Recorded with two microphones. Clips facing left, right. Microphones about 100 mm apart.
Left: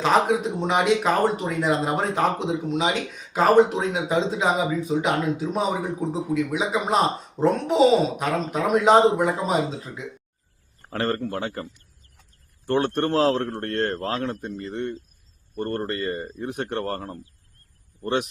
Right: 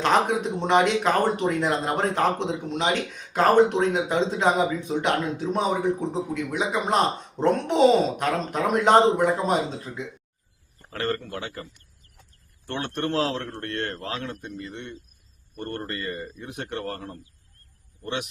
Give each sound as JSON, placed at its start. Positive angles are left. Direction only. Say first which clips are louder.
{"t": 0.0, "sound": "speech", "louder": "left 2 dB", "side_deg": 5}
{"t": 10.8, "sound": "a man's voice", "louder": "left 3 dB", "side_deg": 35}
{"t": 12.6, "sound": "a man's voice", "louder": "left 6 dB", "side_deg": 40}